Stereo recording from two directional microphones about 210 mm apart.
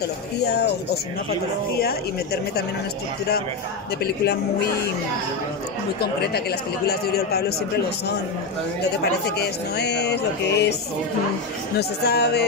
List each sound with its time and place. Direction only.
6.9 s speech: 50° left (ahead or behind)
9.2 s speech: 50° left (ahead or behind)
12.0 s speech: 50° left (ahead or behind)